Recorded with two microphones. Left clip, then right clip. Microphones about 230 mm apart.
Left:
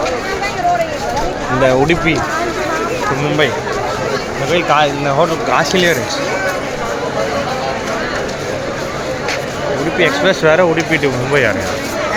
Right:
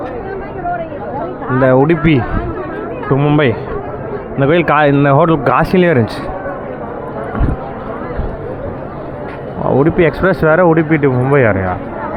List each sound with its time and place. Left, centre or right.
1.6 s speech: centre
3.2 s speech: right
4.5 s speech: right
5.5 s speech: centre
10.0 s speech: centre